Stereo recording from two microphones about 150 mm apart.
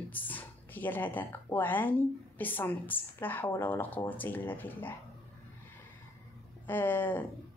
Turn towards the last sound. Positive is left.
turn(degrees=10)  # may be behind; listen again after turning